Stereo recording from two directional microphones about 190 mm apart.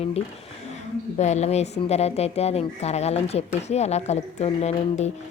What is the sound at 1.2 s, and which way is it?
A woman's voice, 35° left (ahead or behind).